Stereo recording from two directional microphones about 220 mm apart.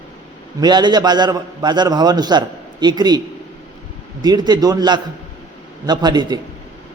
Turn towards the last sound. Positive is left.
turn(degrees=-20)  # may be behind; listen again after turning